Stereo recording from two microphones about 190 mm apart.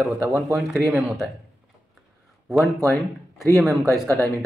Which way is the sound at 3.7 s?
15° right (ahead or behind).